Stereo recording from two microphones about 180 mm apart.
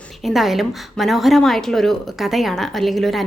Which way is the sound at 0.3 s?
Centre (ahead or behind).